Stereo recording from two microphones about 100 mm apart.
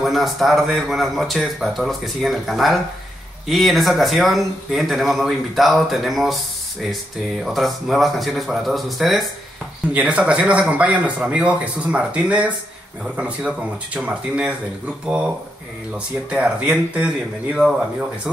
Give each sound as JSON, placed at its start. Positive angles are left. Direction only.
{"t": 0.0, "sound": "speech", "side_deg": 0}
{"t": 9.9, "sound": "speech", "side_deg": -10}